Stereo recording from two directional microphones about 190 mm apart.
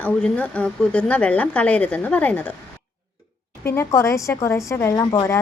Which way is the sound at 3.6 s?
15° left (ahead or behind).